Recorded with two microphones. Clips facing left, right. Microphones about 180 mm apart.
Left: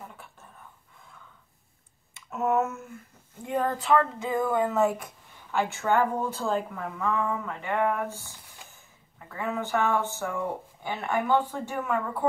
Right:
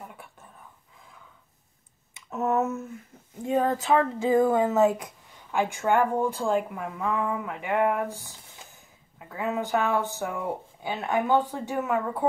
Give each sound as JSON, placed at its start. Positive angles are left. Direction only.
{"t": 3.4, "sound": "speech", "side_deg": -25}